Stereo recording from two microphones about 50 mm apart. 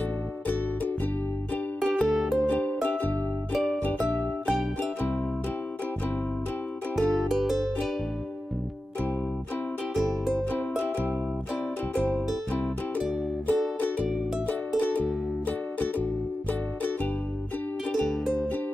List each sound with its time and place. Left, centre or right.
2.0 s music: centre
2.4 s music: left
7.0 s music: centre
11.9 s music: left
13.5 s music: left